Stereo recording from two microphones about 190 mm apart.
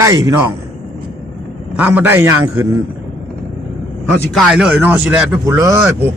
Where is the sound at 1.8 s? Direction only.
10° right (ahead or behind).